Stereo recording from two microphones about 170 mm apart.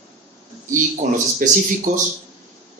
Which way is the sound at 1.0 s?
45° right (ahead or behind).